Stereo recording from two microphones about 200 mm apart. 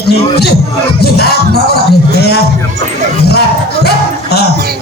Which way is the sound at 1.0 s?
55° left (ahead or behind).